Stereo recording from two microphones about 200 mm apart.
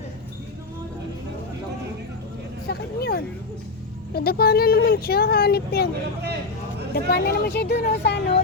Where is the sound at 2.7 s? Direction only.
55° left (ahead or behind).